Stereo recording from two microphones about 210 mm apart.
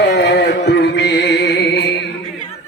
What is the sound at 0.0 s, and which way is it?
Music, 55° left (ahead or behind).